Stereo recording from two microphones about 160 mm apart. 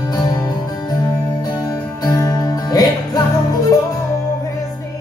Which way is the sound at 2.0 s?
20° left (ahead or behind).